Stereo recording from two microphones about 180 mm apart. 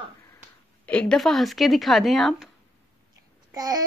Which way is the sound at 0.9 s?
5° left (ahead or behind).